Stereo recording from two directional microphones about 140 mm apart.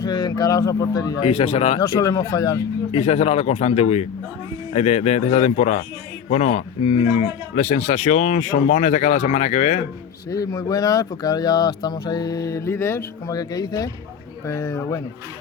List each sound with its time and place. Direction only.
0.0 s speech: 30° left (ahead or behind)
1.2 s a man's voice: 40° left (ahead or behind)
1.8 s speech: 25° left (ahead or behind)
2.9 s a man's voice: 45° left (ahead or behind)
10.2 s speech: 25° left (ahead or behind)